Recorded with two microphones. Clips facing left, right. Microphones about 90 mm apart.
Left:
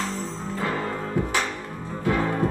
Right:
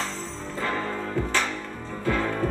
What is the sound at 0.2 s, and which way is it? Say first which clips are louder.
Music: left 2 dB; 15° left (ahead or behind).